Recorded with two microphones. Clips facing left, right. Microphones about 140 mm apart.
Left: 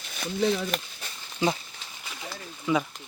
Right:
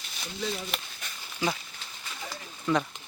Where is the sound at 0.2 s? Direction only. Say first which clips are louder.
Left 9 dB; 60° left (ahead or behind).